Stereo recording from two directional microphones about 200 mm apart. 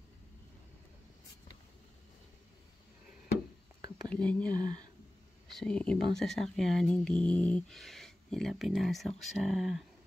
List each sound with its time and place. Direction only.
4.1 s speech: 5° left (ahead or behind)
4.6 s speech: 20° right (ahead or behind)
5.5 s speech: 5° left (ahead or behind)